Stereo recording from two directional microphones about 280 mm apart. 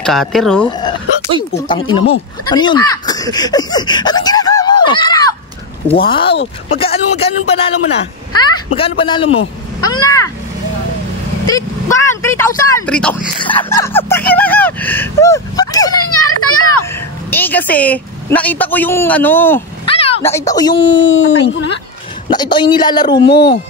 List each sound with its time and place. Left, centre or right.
0.0 s a man's voice: centre
0.7 s speech: centre
8.7 s speech: centre
9.3 s a man's voice: left
10.0 s speech: centre
11.4 s speech: centre
16.0 s a child's voice: left
17.3 s a man's voice: centre
19.9 s a sound: centre
20.2 s speech: centre
20.9 s speech: left
22.3 s speech: centre
23.3 s speech: left